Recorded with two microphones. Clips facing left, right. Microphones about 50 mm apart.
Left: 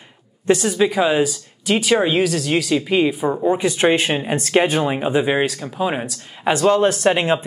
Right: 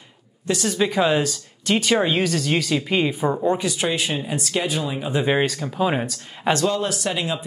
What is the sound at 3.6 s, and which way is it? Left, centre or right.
Speech, left.